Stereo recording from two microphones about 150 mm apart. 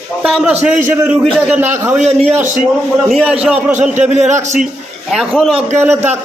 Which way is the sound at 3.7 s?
50° right (ahead or behind).